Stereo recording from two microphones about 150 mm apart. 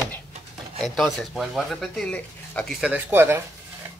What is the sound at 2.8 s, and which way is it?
Speech, 10° right (ahead or behind).